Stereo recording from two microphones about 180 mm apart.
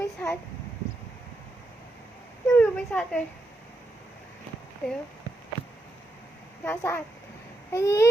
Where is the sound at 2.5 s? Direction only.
5° left (ahead or behind).